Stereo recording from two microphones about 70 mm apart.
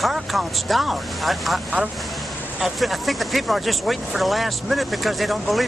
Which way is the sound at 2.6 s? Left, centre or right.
Centre.